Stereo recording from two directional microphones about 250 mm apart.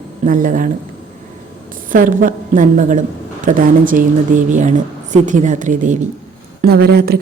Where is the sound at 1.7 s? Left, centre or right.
Right.